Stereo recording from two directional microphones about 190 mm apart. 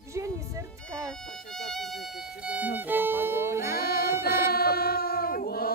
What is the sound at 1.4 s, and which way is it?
A woman's voice, centre (ahead or behind).